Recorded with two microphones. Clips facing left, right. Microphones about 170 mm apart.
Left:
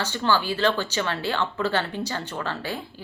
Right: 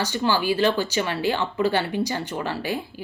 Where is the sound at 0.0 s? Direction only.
10° right (ahead or behind).